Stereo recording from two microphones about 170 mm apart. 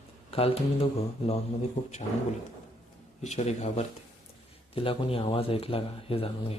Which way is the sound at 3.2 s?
40° left (ahead or behind).